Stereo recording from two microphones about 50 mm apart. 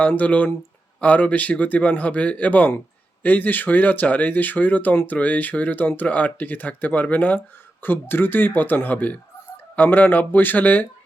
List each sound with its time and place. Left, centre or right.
0.1 s speech: left
7.8 s speech: left